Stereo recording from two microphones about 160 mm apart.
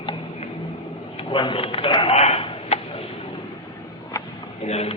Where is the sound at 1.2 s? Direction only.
30° left (ahead or behind).